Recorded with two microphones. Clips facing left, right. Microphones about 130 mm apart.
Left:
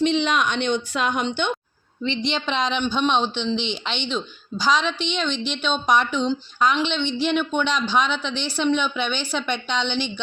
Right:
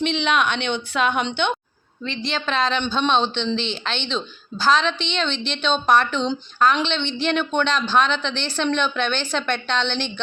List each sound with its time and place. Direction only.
0.3 s speech: 65° right (ahead or behind)
2.0 s speech: 20° left (ahead or behind)